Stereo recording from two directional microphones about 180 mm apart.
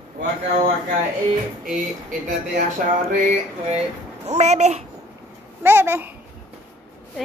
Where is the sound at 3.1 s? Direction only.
45° right (ahead or behind).